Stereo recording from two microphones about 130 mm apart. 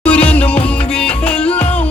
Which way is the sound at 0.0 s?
10° left (ahead or behind).